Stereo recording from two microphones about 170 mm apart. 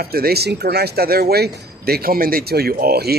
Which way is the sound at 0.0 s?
65° right (ahead or behind).